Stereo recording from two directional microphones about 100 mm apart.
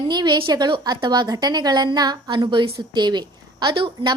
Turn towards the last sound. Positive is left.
turn(degrees=-55)  # may be behind; listen again after turning